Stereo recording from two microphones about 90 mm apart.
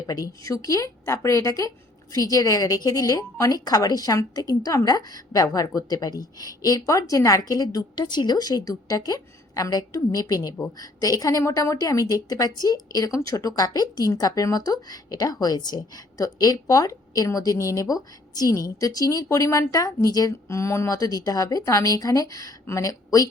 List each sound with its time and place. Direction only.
0.1 s a woman's voice: 45° left (ahead or behind)